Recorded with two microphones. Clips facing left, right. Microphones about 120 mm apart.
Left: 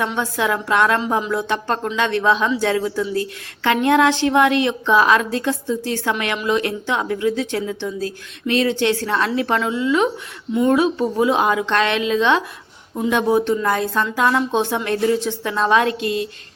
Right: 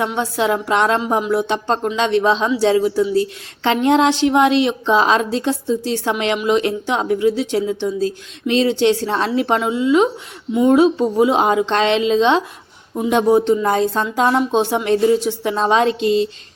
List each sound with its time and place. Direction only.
0.1 s a woman's voice: 15° right (ahead or behind)